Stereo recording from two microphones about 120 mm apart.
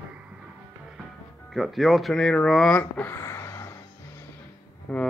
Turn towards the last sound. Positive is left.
turn(degrees=10)  # may be behind; listen again after turning